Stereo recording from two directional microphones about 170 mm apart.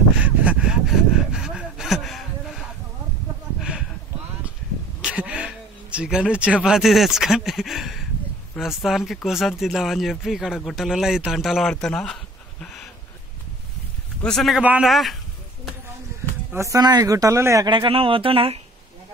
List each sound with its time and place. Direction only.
0.2 s a sound: 10° right (ahead or behind)
5.1 s speech: 5° right (ahead or behind)
14.2 s speech: centre (ahead or behind)
16.5 s speech: 20° right (ahead or behind)
17.6 s speech: 30° right (ahead or behind)